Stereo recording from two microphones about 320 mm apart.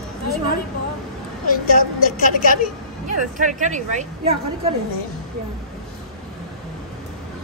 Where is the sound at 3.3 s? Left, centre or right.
Right.